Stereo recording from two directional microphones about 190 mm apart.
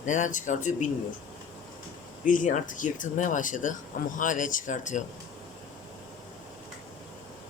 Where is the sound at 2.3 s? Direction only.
45° left (ahead or behind).